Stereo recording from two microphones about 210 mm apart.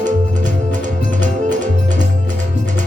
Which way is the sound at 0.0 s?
35° right (ahead or behind).